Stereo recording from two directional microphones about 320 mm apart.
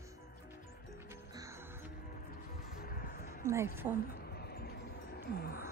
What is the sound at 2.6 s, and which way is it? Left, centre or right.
Music, left.